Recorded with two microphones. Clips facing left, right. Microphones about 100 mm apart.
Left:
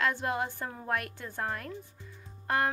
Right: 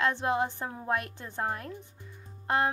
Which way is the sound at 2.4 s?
20° right (ahead or behind).